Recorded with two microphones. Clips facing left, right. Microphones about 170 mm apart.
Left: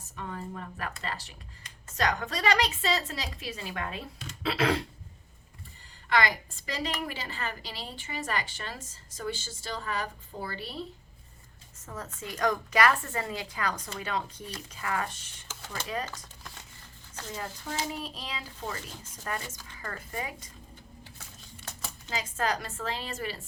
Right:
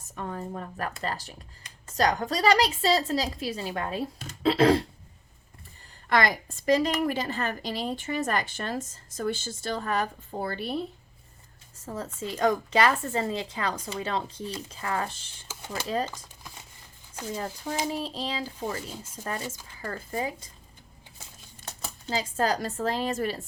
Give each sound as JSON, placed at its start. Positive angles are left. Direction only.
{"t": 0.2, "sound": "a woman's voice", "side_deg": -40}
{"t": 6.1, "sound": "a woman's voice", "side_deg": -45}
{"t": 11.9, "sound": "a woman's voice", "side_deg": -30}
{"t": 16.1, "sound": "crumpling", "side_deg": -10}
{"t": 17.9, "sound": "a woman's voice", "side_deg": -30}
{"t": 21.7, "sound": "speech", "side_deg": -35}